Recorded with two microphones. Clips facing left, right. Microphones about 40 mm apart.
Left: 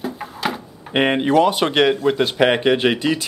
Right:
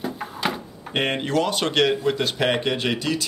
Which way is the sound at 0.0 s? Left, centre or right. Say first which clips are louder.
Left 2 dB; centre.